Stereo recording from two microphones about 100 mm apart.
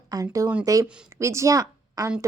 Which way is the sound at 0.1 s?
35° right (ahead or behind).